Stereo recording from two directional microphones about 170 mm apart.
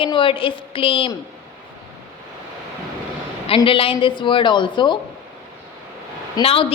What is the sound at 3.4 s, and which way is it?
Speech, 30° left (ahead or behind).